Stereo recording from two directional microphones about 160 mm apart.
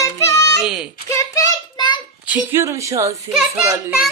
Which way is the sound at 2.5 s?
20° right (ahead or behind).